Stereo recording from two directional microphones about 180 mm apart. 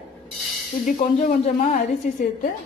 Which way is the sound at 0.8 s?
45° left (ahead or behind).